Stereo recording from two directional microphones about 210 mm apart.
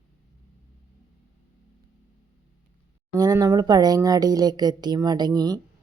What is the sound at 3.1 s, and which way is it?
Speech, 15° right (ahead or behind).